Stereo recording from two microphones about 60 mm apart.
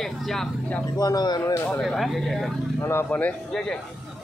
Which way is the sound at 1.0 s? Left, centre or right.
Left.